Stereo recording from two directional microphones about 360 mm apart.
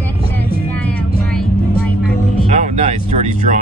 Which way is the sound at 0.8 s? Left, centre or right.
Centre.